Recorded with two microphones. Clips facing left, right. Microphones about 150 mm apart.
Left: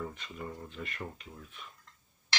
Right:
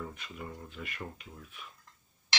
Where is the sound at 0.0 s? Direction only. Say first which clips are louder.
Left 2 dB; 5° right (ahead or behind).